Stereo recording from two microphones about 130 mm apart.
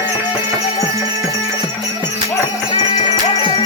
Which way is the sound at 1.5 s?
35° left (ahead or behind).